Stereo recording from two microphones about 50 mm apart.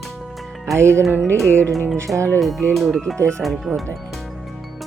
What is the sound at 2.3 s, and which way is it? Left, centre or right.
Speech, centre.